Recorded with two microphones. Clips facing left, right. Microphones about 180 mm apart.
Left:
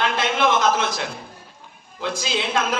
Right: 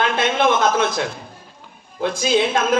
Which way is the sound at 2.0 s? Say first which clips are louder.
Right 7 dB; 50° right (ahead or behind).